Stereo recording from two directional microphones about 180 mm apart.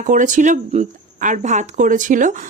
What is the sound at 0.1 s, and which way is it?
Speech, 45° right (ahead or behind).